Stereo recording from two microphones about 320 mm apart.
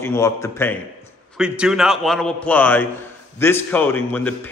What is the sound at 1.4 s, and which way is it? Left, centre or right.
A man's voice, centre.